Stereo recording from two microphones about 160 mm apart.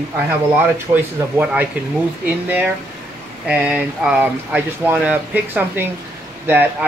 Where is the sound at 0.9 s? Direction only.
15° right (ahead or behind).